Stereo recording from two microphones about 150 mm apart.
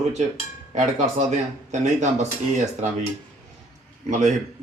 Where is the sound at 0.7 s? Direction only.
50° right (ahead or behind).